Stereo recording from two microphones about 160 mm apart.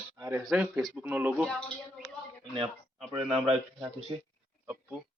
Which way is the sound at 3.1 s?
40° right (ahead or behind).